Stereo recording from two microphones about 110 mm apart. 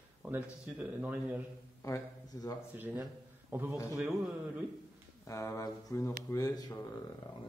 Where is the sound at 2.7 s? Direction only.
15° right (ahead or behind).